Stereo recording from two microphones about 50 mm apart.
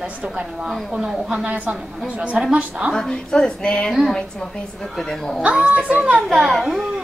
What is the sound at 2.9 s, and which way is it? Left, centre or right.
A woman's voice, centre.